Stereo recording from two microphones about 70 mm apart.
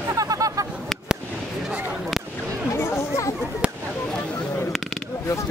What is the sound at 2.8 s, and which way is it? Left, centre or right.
Chatter, left.